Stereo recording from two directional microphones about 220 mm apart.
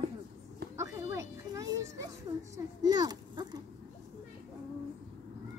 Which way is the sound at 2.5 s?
20° right (ahead or behind).